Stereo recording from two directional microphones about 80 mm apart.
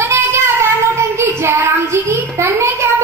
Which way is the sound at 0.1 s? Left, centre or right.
Right.